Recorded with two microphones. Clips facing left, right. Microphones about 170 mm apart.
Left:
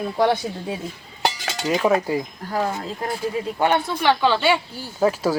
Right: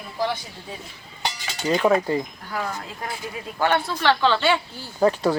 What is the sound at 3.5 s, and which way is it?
Speech, 20° left (ahead or behind).